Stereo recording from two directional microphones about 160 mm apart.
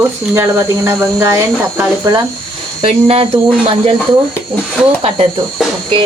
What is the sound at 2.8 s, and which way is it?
Speech, 35° right (ahead or behind).